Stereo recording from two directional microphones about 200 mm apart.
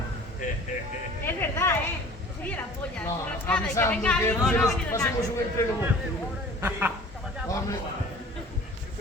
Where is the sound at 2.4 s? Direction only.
10° left (ahead or behind).